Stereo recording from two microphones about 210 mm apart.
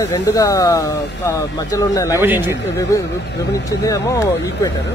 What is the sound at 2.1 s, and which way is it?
Speech, 10° right (ahead or behind).